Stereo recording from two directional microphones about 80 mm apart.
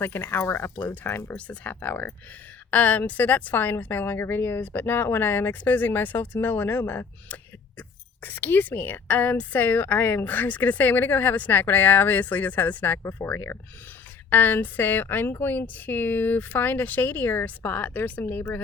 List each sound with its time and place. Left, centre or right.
0.0 s a woman's voice: left